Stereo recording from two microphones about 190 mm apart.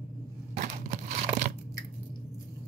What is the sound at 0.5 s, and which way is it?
Tearing, 35° right (ahead or behind).